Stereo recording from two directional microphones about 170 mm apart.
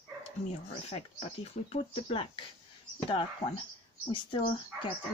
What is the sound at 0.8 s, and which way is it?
Speech, 35° left (ahead or behind).